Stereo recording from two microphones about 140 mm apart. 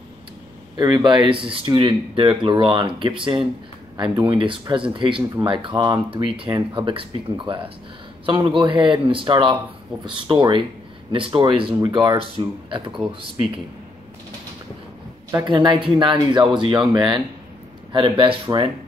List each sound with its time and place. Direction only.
0.7 s speech: 25° right (ahead or behind)
15.4 s speech: 35° right (ahead or behind)